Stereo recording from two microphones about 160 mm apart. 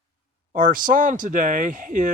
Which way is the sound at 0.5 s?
60° right (ahead or behind).